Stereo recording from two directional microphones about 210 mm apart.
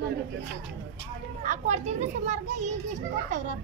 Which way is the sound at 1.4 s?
35° right (ahead or behind).